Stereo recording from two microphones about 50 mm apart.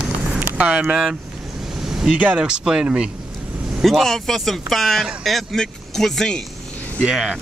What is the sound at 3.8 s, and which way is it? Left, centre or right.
Speech, centre.